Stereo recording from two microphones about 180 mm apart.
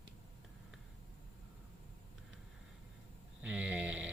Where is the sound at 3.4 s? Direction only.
5° right (ahead or behind).